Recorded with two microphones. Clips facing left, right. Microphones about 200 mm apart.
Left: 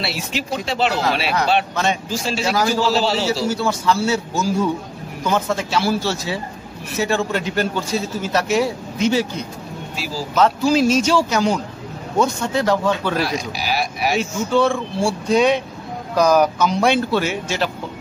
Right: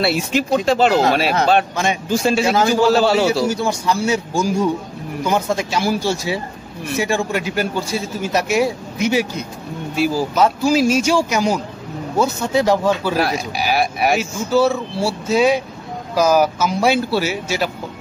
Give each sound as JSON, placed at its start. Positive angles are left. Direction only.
{"t": 0.0, "sound": "speech", "side_deg": -50}
{"t": 2.5, "sound": "a man's voice", "side_deg": -25}
{"t": 2.8, "sound": "speech", "side_deg": -50}
{"t": 3.4, "sound": "a man's voice", "side_deg": -15}
{"t": 9.9, "sound": "speech", "side_deg": -55}
{"t": 10.3, "sound": "a man's voice", "side_deg": -10}
{"t": 13.2, "sound": "speech", "side_deg": -55}
{"t": 14.1, "sound": "a man's voice", "side_deg": -5}